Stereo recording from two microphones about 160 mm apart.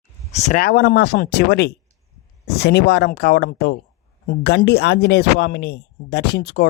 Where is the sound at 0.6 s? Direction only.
80° left.